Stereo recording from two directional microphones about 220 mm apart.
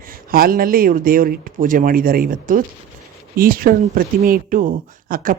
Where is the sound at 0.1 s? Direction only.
40° right (ahead or behind).